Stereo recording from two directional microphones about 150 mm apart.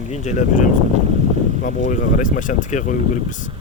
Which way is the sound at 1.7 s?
60° left (ahead or behind).